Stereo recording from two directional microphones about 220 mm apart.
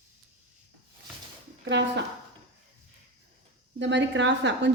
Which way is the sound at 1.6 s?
55° right (ahead or behind).